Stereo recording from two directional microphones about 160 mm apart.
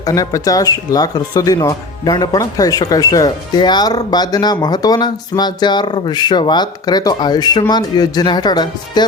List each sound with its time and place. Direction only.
0.0 s speech: 20° left (ahead or behind)